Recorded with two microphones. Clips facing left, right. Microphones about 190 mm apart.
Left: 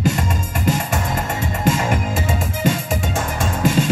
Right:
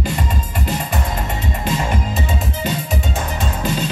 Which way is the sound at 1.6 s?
45° left (ahead or behind).